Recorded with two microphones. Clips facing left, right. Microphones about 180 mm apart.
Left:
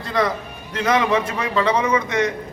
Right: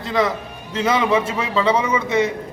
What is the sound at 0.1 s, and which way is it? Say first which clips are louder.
A man's voice: right 1 dB; centre (ahead or behind).